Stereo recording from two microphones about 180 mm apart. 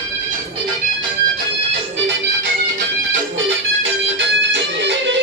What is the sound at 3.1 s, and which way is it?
Music, 90° right.